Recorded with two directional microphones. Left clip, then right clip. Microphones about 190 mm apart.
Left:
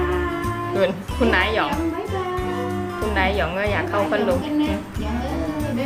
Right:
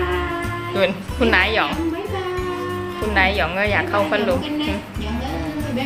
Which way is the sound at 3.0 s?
5° left (ahead or behind).